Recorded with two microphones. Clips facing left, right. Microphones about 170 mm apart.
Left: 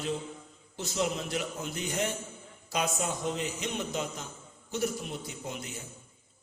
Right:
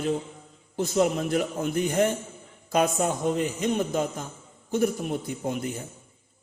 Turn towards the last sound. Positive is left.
turn(degrees=-50)  # may be behind; listen again after turning